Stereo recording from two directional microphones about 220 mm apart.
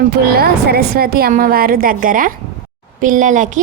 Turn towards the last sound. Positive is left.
turn(degrees=-35)  # may be behind; listen again after turning